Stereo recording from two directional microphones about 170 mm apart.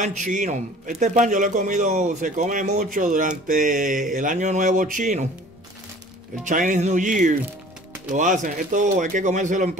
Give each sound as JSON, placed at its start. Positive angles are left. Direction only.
{"t": 0.0, "sound": "a man's voice", "side_deg": -45}
{"t": 6.4, "sound": "a man's voice", "side_deg": -50}